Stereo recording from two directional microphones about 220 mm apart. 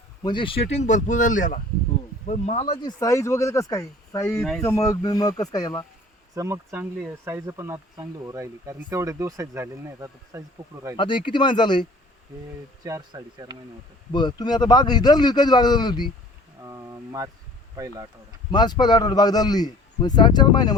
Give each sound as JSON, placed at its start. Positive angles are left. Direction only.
{"t": 0.2, "sound": "a man's voice", "side_deg": 20}
{"t": 3.0, "sound": "speech", "side_deg": 15}
{"t": 6.3, "sound": "speech", "side_deg": -15}
{"t": 10.9, "sound": "a man's voice", "side_deg": 20}
{"t": 12.8, "sound": "speech", "side_deg": -15}
{"t": 14.1, "sound": "a man's voice", "side_deg": 20}
{"t": 16.6, "sound": "speech", "side_deg": -15}
{"t": 18.5, "sound": "a man's voice", "side_deg": 20}